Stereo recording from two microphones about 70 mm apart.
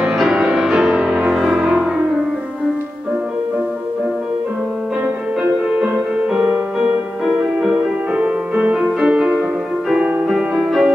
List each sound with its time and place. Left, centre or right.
0.0 s music: centre
5.0 s music: centre